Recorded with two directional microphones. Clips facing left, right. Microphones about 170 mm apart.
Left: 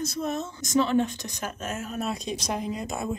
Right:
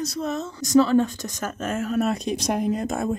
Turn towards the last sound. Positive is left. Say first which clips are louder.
# right 6 dB
turn(degrees=-50)  # may be behind; listen again after turning